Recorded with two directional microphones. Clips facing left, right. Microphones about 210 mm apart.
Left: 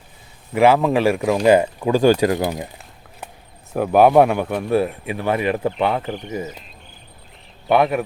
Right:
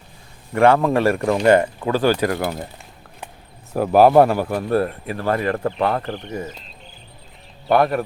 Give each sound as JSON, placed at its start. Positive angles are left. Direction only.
{"t": 0.5, "sound": "speech", "side_deg": 5}
{"t": 3.7, "sound": "speech", "side_deg": 0}
{"t": 7.7, "sound": "speech", "side_deg": 0}